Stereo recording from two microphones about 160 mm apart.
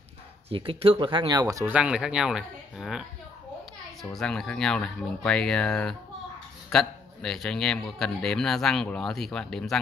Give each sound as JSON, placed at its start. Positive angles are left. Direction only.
{"t": 0.5, "sound": "speech", "side_deg": -35}
{"t": 1.7, "sound": "a man's voice", "side_deg": -5}